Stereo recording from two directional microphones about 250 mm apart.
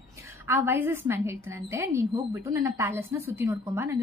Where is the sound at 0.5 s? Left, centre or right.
Centre.